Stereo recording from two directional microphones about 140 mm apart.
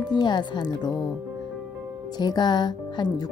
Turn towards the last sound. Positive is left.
turn(degrees=30)  # may be behind; listen again after turning